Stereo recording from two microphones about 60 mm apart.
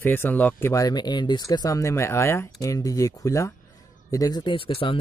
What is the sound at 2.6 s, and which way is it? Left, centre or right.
Speech, left.